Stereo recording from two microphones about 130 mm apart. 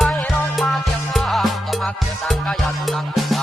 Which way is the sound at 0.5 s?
Centre (ahead or behind).